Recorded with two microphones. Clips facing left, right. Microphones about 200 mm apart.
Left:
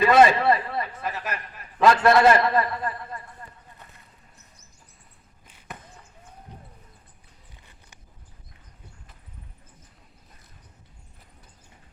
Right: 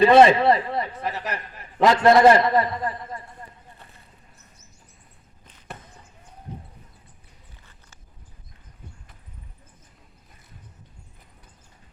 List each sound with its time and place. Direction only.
0.0 s a man's voice: 30° right (ahead or behind)
1.8 s a man's voice: 20° right (ahead or behind)